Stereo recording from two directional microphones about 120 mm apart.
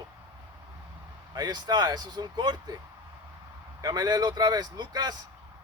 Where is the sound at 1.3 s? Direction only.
35° right (ahead or behind).